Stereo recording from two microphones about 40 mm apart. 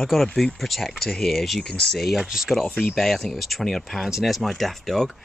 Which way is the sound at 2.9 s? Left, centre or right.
Centre.